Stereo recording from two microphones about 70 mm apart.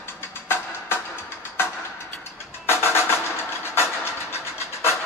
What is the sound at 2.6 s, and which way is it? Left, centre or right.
Music, left.